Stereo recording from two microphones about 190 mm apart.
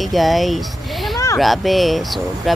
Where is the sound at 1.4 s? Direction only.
Centre (ahead or behind).